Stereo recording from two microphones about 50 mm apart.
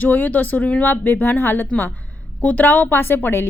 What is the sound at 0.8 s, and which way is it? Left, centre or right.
Speech, left.